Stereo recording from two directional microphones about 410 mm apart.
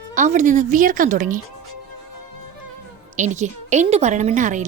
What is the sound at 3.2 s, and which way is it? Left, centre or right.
Speech, centre.